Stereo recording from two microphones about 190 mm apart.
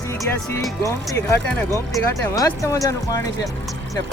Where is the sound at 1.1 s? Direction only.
10° left (ahead or behind).